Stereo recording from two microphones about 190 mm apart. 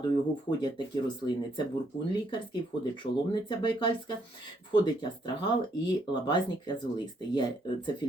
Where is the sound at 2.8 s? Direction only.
25° left (ahead or behind).